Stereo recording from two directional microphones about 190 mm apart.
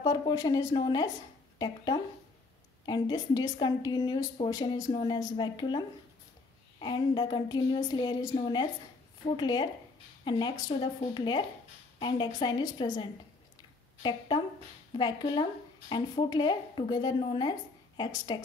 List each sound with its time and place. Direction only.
0.0 s a woman's voice: 20° left (ahead or behind)